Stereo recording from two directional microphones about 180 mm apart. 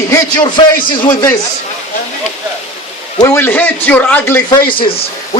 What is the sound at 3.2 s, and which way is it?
A man's voice, 15° left (ahead or behind).